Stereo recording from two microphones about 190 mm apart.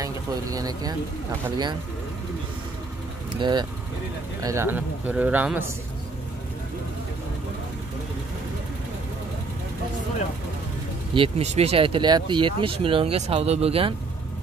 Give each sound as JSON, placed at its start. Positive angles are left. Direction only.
{"t": 0.0, "sound": "speech", "side_deg": -20}
{"t": 3.3, "sound": "speech", "side_deg": -25}
{"t": 11.1, "sound": "speech", "side_deg": -35}